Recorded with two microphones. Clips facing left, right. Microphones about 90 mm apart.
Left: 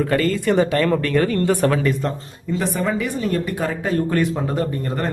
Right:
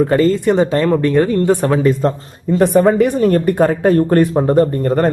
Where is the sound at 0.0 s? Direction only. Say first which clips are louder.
Right 6 dB; 25° right (ahead or behind).